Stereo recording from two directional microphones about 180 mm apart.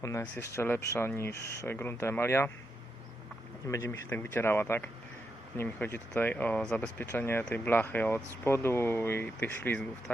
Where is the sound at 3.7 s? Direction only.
15° left (ahead or behind).